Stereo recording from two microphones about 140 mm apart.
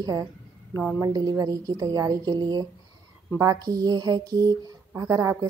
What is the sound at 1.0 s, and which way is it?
Speech, 30° right (ahead or behind).